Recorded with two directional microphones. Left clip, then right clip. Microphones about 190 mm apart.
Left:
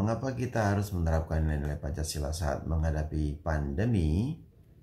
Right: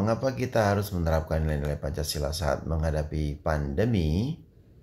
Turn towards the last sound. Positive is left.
turn(degrees=-15)  # may be behind; listen again after turning